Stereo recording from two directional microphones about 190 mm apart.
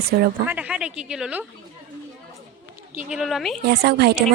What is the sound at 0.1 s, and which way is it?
Speech, 55° right (ahead or behind).